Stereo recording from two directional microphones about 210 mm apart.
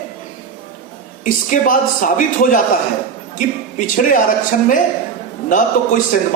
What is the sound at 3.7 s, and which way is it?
Speech, 40° left (ahead or behind).